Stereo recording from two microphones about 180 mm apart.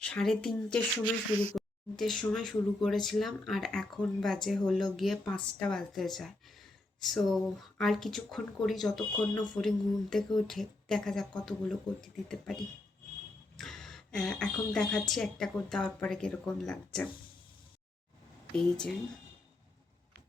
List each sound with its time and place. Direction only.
0.0 s a woman's voice: 5° left (ahead or behind)
18.5 s a woman's voice: 5° left (ahead or behind)